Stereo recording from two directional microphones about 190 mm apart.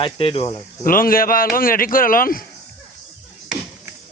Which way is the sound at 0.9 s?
50° left (ahead or behind).